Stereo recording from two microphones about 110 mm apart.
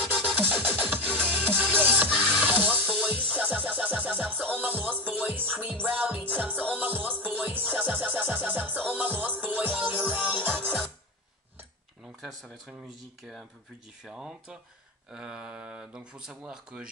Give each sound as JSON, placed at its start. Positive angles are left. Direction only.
{"t": 0.4, "sound": "music", "side_deg": -15}
{"t": 12.2, "sound": "speech", "side_deg": 0}